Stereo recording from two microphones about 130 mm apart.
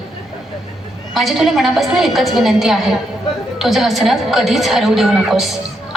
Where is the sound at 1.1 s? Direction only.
Centre (ahead or behind).